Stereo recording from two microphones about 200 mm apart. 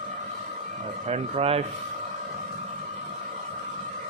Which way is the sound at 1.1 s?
30° right (ahead or behind).